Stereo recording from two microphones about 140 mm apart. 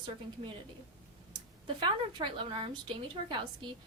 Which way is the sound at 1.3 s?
35° right (ahead or behind).